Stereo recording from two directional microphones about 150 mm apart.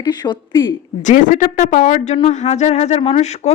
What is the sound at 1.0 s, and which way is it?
Speech, 60° left (ahead or behind).